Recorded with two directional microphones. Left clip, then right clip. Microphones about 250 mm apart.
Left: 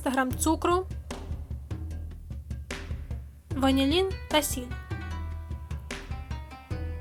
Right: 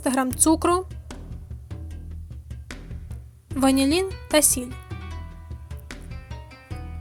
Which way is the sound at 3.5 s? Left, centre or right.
Right.